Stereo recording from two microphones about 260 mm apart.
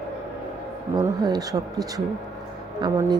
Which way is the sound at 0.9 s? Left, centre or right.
Centre.